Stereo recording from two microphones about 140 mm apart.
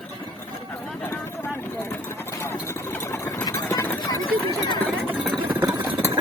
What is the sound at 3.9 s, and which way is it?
Horse, 35° left (ahead or behind).